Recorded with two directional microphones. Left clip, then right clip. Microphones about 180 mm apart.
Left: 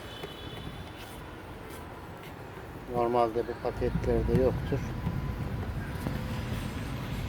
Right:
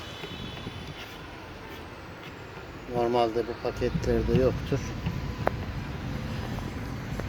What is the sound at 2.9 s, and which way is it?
Speech, 45° right (ahead or behind).